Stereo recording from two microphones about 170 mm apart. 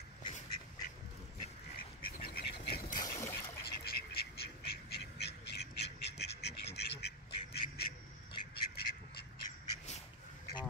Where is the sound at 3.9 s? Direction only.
65° left (ahead or behind).